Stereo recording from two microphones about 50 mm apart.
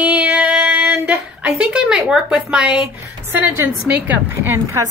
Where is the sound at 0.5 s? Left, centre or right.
Centre.